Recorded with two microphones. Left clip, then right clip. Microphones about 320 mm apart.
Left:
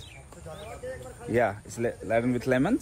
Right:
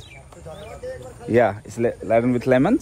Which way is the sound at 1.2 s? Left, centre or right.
Right.